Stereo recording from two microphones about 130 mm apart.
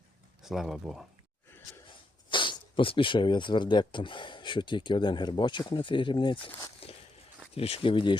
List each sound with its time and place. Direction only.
0.4 s speech: centre (ahead or behind)
2.3 s speech: 40° left (ahead or behind)
6.8 s walk: 50° left (ahead or behind)
7.5 s speech: 45° left (ahead or behind)